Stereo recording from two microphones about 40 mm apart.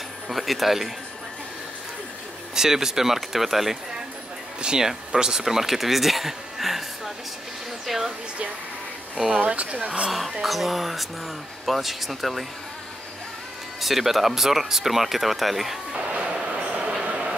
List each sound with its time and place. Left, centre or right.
0.3 s speech: centre
2.5 s speech: centre
4.6 s speech: centre
7.8 s speech: centre
9.1 s speech: centre
9.4 s speech: right
10.4 s speech: centre
13.7 s speech: centre
16.1 s train: right
17.0 s a sound: right